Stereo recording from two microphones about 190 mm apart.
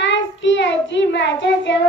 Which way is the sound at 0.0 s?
70° left (ahead or behind).